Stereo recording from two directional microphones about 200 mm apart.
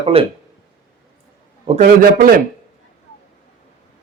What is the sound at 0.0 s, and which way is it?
Speech, 30° right (ahead or behind).